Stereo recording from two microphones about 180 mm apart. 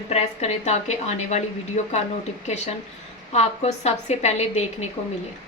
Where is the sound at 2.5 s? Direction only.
40° left (ahead or behind).